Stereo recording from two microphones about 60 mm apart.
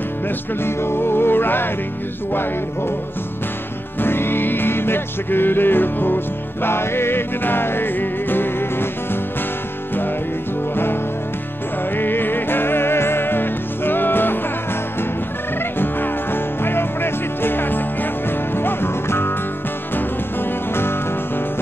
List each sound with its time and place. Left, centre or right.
0.7 s music: left
4.0 s music: left
12.0 s music: left
15.8 s music: left